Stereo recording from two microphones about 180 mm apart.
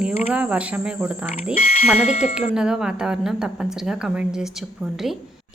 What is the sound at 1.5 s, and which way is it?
Speech, 35° left (ahead or behind).